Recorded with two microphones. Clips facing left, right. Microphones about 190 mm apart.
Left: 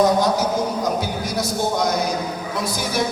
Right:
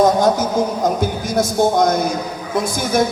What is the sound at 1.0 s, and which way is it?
Speech, 50° right (ahead or behind).